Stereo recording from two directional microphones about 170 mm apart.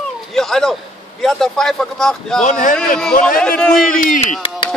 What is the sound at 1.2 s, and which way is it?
Speech, centre (ahead or behind).